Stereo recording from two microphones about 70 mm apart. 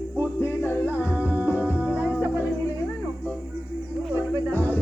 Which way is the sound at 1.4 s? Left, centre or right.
Left.